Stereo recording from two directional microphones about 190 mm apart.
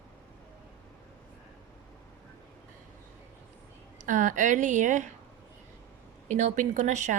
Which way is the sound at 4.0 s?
40° right (ahead or behind).